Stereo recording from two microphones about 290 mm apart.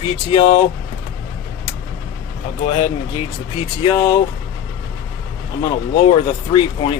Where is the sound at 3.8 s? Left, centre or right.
Centre.